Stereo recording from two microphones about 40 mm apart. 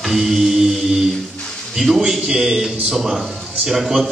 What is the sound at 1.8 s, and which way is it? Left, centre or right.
A man's voice, centre.